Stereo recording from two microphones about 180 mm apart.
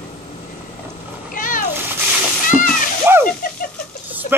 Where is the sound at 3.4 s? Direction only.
45° left (ahead or behind).